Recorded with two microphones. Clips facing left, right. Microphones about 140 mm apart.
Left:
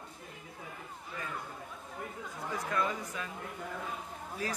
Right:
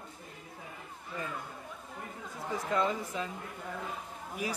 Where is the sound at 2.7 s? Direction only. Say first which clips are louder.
Right 4 dB; 25° right (ahead or behind).